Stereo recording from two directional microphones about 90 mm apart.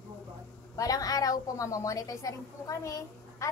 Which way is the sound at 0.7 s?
45° left (ahead or behind).